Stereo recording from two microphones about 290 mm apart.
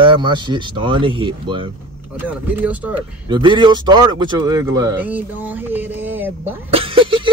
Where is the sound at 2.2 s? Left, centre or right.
Centre.